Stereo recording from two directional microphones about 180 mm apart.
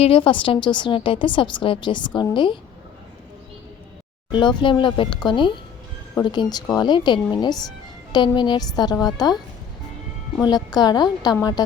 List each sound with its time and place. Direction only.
0.0 s a woman's voice: 30° left (ahead or behind)
4.3 s a woman's voice: 25° left (ahead or behind)
10.4 s a woman's voice: 20° left (ahead or behind)